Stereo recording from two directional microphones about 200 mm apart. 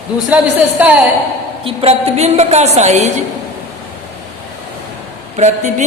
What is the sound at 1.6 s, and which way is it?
Speech, 30° right (ahead or behind).